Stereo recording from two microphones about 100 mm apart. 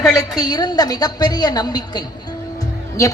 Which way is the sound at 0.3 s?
40° left (ahead or behind).